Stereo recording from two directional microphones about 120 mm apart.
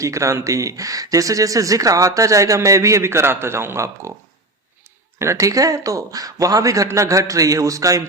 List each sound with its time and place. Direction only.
0.0 s speech: 25° right (ahead or behind)
5.2 s speech: 25° right (ahead or behind)